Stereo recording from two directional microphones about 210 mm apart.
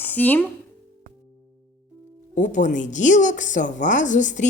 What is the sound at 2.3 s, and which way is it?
Speech, 35° left (ahead or behind).